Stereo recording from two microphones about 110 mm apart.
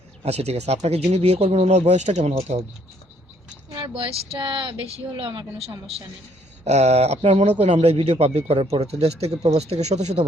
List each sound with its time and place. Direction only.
0.2 s speech: 75° right (ahead or behind)
3.9 s speech: 55° right (ahead or behind)
6.7 s speech: 80° right
7.6 s speech: 65° right (ahead or behind); by 10.2 s 90° right